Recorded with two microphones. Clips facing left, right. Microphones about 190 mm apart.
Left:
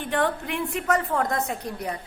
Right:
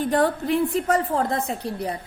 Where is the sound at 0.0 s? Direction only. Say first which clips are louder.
Right 4 dB; 35° right (ahead or behind).